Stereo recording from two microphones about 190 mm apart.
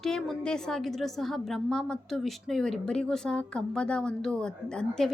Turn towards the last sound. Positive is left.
turn(degrees=5)  # may be behind; listen again after turning